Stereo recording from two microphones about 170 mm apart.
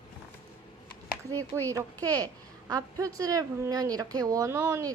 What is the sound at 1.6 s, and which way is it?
A child's voice, 20° right (ahead or behind).